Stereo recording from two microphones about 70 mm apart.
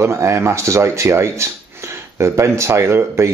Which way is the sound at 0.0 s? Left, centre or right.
Right.